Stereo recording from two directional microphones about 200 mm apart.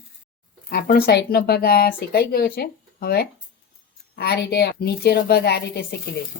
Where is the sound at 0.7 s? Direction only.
50° left (ahead or behind).